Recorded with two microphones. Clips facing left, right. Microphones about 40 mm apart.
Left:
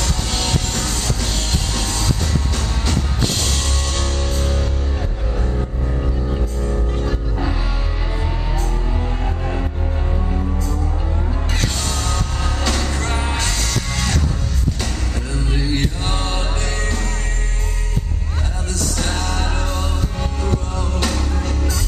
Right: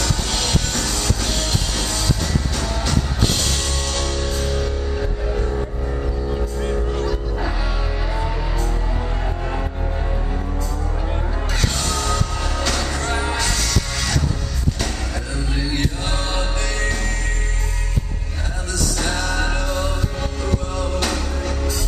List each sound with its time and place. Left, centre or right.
3.6 s music: left
12.1 s music: left
15.7 s chant: left
16.8 s music: right
18.9 s music: right